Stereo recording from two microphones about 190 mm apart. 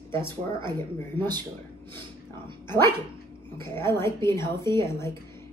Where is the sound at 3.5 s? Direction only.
15° left (ahead or behind).